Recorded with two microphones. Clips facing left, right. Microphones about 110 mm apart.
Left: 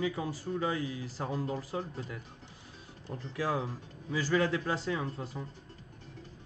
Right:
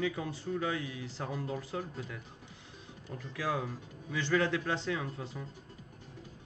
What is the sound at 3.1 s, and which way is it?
Speech, 20° left (ahead or behind).